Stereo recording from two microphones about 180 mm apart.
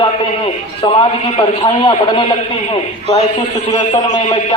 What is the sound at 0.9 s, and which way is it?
A man's voice, 30° left (ahead or behind).